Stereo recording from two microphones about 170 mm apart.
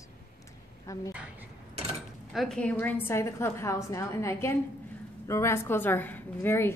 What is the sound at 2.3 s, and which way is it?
A woman's voice, centre (ahead or behind).